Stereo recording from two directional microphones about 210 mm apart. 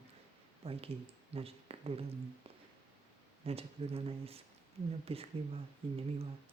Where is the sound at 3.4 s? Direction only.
30° right (ahead or behind).